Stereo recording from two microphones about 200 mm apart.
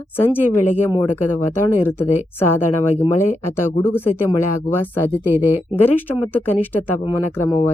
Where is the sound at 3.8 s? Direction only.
10° left (ahead or behind).